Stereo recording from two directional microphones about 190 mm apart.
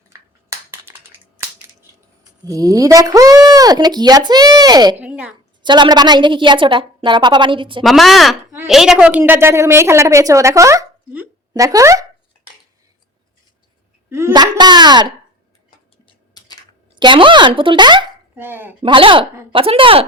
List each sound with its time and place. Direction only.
2.4 s speech: 20° right (ahead or behind)
4.9 s a woman's voice: 5° right (ahead or behind)
5.6 s speech: 25° right (ahead or behind)
7.8 s a woman's voice: centre (ahead or behind); by 12.0 s 15° right (ahead or behind)
14.1 s speech: 15° right (ahead or behind)
16.9 s speech: 25° right (ahead or behind)
18.3 s a woman's voice: 10° right (ahead or behind)
18.8 s speech: 25° right (ahead or behind)